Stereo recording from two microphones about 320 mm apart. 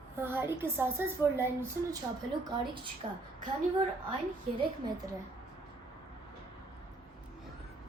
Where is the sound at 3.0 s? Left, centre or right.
Centre.